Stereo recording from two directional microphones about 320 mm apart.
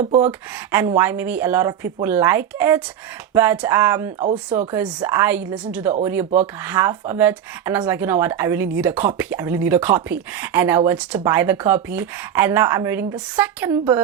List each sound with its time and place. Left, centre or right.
0.0 s speech: right
0.3 s speech: centre